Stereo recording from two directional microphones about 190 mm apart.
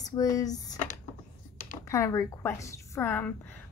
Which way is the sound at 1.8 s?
15° left (ahead or behind).